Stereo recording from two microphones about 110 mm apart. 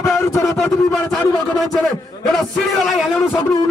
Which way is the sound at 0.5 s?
10° left (ahead or behind).